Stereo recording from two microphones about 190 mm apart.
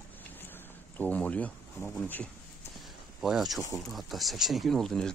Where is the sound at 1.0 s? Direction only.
5° left (ahead or behind).